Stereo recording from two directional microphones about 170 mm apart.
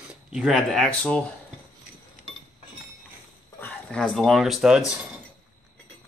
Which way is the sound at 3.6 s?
5° left (ahead or behind).